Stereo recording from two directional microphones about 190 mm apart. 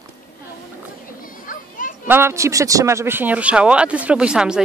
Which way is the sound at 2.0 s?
10° right (ahead or behind).